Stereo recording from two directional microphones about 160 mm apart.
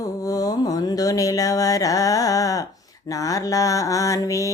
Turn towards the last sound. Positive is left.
turn(degrees=20)  # may be behind; listen again after turning